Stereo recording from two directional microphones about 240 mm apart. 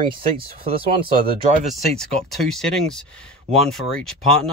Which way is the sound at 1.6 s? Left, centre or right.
Centre.